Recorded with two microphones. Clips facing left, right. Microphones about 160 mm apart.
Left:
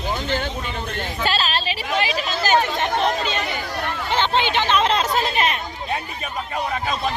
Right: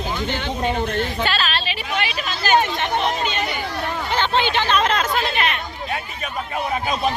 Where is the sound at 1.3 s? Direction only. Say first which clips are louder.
Left 1 dB; 35° left (ahead or behind).